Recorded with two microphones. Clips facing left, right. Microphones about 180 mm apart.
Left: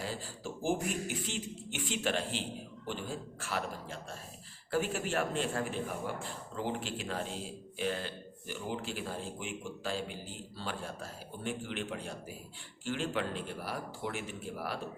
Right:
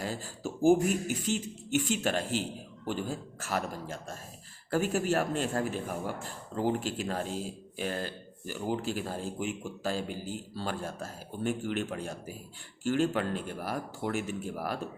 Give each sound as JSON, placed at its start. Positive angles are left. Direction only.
{"t": 0.0, "sound": "speech", "side_deg": -45}